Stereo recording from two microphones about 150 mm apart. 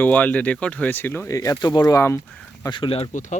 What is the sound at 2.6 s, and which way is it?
Speech, 35° left (ahead or behind).